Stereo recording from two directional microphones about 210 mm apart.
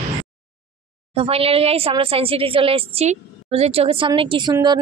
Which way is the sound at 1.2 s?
30° right (ahead or behind).